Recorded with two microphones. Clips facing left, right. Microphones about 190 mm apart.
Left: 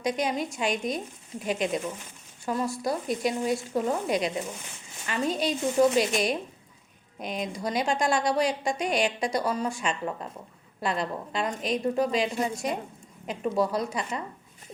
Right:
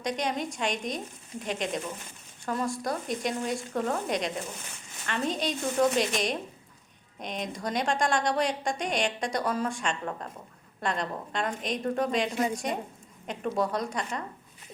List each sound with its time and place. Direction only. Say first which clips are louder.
0.0 s a woman's voice: left 3 dB; 5° left (ahead or behind)